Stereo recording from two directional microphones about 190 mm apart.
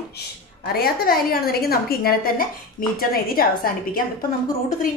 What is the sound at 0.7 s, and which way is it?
A woman's voice, 50° left (ahead or behind).